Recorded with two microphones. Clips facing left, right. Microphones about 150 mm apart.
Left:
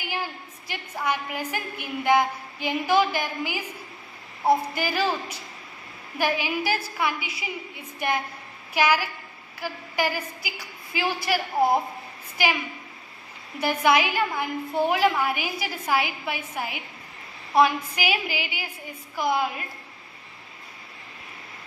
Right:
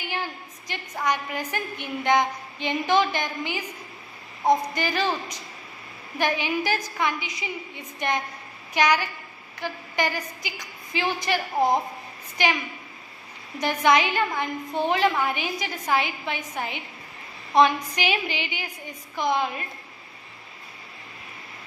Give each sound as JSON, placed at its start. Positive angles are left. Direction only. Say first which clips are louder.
{"t": 0.0, "sound": "a woman's voice", "louder": "even", "side_deg": 10}
{"t": 13.6, "sound": "a woman's voice", "louder": "even", "side_deg": 10}